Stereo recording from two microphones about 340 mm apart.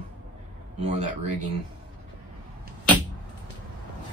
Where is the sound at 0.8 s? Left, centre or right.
Centre.